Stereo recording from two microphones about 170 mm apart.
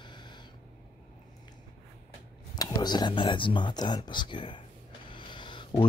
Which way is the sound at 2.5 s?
25° left (ahead or behind).